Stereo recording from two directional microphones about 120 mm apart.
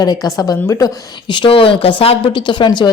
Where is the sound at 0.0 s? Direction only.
35° left (ahead or behind).